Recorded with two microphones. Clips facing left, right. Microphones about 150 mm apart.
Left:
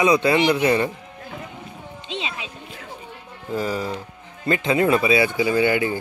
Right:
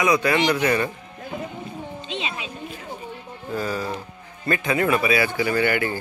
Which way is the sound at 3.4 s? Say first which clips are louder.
Left 2 dB; 20° left (ahead or behind).